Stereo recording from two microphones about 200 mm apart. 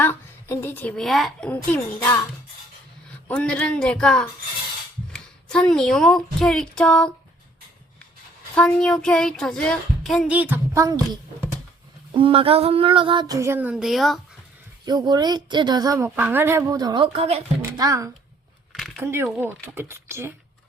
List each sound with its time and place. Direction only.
0.0 s a woman's voice: 10° left (ahead or behind)
3.2 s music: 5° left (ahead or behind)
5.1 s speech: 5° left (ahead or behind)
8.5 s music: 5° left (ahead or behind); by 11.2 s 15° right (ahead or behind)
12.1 s a woman's voice: 25° right (ahead or behind); by 14.2 s centre (ahead or behind)
14.8 s a woman's voice: 20° right (ahead or behind)
17.6 s a child's voice: 15° right (ahead or behind)
18.7 s a sound: centre (ahead or behind)
19.0 s speech: 10° right (ahead or behind)